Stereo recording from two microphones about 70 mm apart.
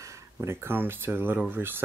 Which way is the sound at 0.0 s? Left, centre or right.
Right.